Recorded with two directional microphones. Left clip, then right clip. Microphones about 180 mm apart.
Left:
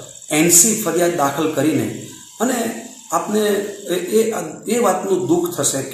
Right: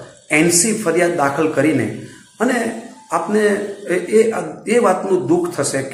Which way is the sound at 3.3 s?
15° right (ahead or behind).